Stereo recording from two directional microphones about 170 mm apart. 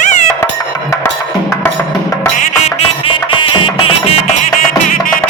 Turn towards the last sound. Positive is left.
turn(degrees=30)  # may be behind; listen again after turning